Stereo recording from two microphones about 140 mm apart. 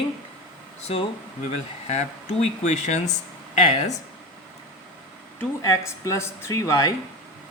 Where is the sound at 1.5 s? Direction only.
50° left (ahead or behind).